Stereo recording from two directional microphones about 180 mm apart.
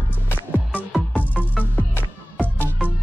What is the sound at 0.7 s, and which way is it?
Music, 5° right (ahead or behind).